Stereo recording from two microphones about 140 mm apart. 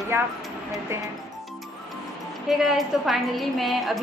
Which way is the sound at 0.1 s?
15° right (ahead or behind).